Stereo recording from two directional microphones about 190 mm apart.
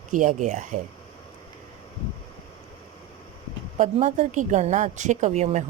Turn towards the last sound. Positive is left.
turn(degrees=-35)  # may be behind; listen again after turning